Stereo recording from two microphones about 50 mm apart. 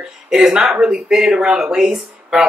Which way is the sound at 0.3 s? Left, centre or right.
Centre.